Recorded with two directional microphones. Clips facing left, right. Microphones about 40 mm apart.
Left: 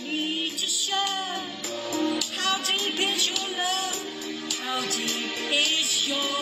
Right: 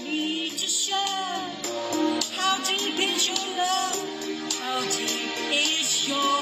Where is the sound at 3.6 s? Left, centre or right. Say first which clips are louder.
Right 4 dB; left.